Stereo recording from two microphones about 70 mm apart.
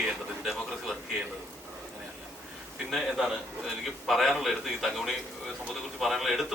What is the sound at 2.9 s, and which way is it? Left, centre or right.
A man's voice, centre.